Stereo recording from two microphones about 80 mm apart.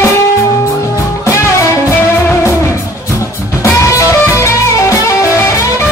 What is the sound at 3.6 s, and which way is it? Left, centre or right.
Music, left.